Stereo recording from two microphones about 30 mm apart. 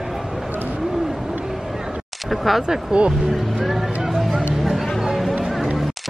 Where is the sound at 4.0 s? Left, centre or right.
Centre.